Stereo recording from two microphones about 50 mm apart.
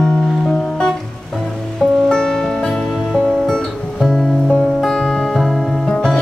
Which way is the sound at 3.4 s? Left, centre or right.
Centre.